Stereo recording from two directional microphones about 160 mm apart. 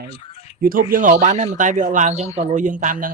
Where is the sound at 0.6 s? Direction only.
65° right (ahead or behind).